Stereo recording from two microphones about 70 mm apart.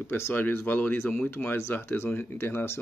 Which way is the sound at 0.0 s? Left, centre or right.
Left.